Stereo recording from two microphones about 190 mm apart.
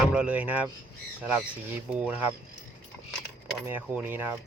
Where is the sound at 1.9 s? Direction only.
5° right (ahead or behind).